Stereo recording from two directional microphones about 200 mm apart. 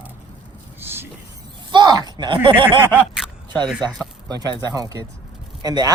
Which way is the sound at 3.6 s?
Centre (ahead or behind).